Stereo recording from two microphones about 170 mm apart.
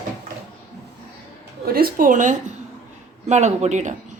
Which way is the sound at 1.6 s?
60° right (ahead or behind).